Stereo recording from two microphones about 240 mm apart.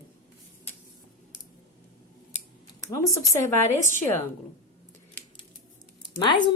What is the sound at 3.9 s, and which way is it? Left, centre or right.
Speech, centre.